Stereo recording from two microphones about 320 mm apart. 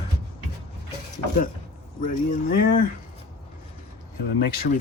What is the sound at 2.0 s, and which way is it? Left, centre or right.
Speech, left.